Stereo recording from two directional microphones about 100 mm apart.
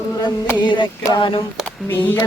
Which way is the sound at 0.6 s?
55° left (ahead or behind).